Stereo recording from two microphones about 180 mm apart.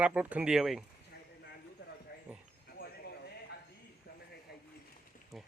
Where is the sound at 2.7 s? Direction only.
60° left (ahead or behind).